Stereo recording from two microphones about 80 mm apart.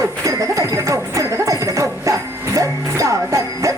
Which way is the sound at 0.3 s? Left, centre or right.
Right.